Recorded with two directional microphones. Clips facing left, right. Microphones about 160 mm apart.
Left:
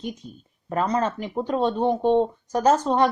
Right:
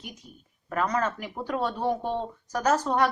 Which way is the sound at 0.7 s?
25° left (ahead or behind).